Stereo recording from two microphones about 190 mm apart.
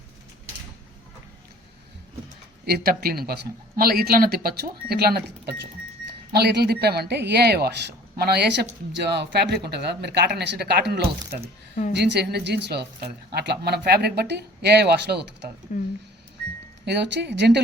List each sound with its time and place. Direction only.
2.6 s speech: 55° right (ahead or behind)
15.7 s speech: 45° left (ahead or behind)
16.8 s speech: 60° right (ahead or behind)